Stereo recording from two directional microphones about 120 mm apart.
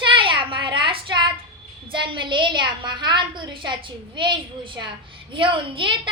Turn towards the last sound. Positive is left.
turn(degrees=-45)  # may be behind; listen again after turning